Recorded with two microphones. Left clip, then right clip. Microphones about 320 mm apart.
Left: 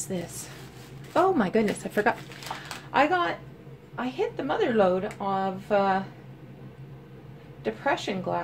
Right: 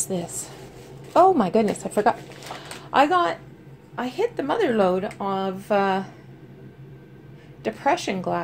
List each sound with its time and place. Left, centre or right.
1.1 s a woman's voice: centre
2.9 s speech: centre
7.6 s speech: right